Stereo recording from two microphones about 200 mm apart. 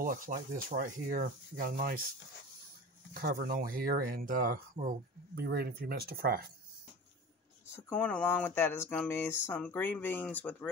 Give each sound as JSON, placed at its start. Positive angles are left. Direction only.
{"t": 0.0, "sound": "speech", "side_deg": -45}
{"t": 7.7, "sound": "speech", "side_deg": 5}